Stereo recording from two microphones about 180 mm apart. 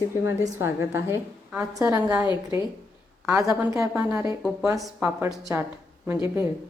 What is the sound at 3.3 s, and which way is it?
A woman's voice, 10° right (ahead or behind).